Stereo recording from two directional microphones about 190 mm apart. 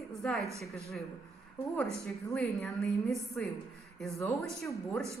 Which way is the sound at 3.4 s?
5° left (ahead or behind).